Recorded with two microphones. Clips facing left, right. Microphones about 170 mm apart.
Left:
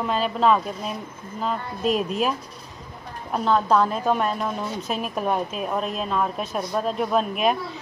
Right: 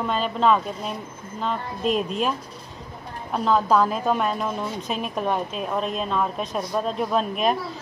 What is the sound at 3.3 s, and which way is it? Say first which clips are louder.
A woman's voice: even; centre (ahead or behind).